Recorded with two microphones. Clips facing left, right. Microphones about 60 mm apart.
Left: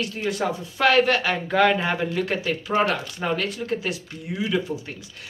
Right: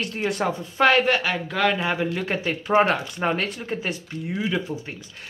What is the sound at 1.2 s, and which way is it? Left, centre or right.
Speech, centre.